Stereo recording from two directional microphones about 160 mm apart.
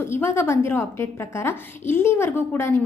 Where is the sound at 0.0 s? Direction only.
15° left (ahead or behind).